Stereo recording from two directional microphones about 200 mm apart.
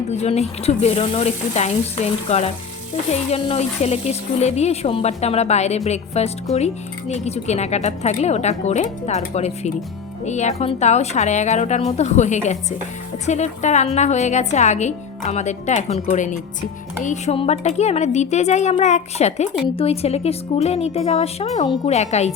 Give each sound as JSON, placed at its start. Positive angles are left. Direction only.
{"t": 0.1, "sound": "speech", "side_deg": 35}